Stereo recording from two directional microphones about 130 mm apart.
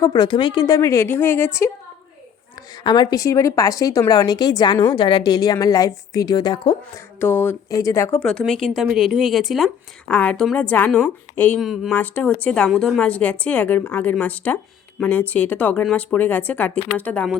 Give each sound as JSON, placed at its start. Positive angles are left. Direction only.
{"t": 0.0, "sound": "a woman's voice", "side_deg": 30}
{"t": 2.6, "sound": "a woman's voice", "side_deg": 35}
{"t": 7.2, "sound": "a woman's voice", "side_deg": 15}
{"t": 8.2, "sound": "a woman's voice", "side_deg": 5}
{"t": 10.1, "sound": "a woman's voice", "side_deg": 10}
{"t": 11.6, "sound": "a woman's voice", "side_deg": 0}
{"t": 11.9, "sound": "a woman's voice", "side_deg": 10}